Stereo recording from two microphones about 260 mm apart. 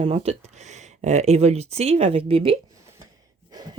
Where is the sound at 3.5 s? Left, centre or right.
Centre.